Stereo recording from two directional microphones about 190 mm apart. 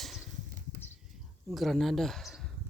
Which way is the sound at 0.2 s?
45° right (ahead or behind).